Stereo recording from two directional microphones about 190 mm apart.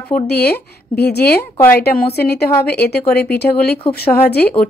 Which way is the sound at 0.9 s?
55° left (ahead or behind).